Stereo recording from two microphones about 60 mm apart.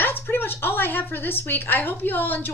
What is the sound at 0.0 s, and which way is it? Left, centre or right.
A woman's voice, left.